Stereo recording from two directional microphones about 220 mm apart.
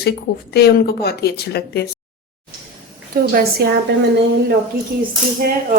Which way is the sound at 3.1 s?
45° right (ahead or behind).